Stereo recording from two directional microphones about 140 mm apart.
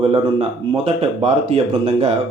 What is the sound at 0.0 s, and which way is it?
Speech, 40° right (ahead or behind).